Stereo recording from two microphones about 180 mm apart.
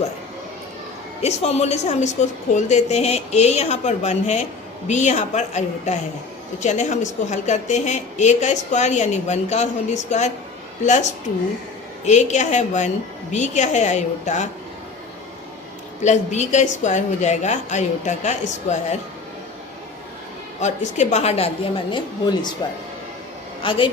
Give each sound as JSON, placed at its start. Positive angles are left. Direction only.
{"t": 1.2, "sound": "a woman's voice", "side_deg": 35}
{"t": 16.0, "sound": "a woman's voice", "side_deg": 40}
{"t": 20.6, "sound": "a woman's voice", "side_deg": 40}
{"t": 23.6, "sound": "a woman's voice", "side_deg": 30}